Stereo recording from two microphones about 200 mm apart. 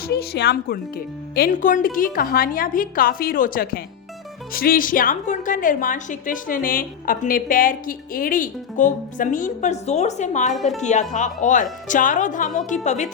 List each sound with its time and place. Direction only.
0.1 s a woman's voice: 55° left (ahead or behind); by 13.1 s 35° left (ahead or behind)